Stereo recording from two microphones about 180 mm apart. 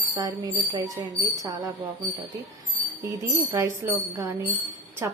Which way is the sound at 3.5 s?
20° right (ahead or behind).